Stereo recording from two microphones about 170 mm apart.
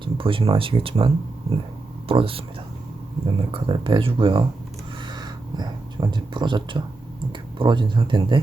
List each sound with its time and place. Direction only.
0.0 s speech: 30° right (ahead or behind)
3.5 s speech: 30° right (ahead or behind)
5.0 s a sound: 25° right (ahead or behind)
7.6 s speech: 30° right (ahead or behind)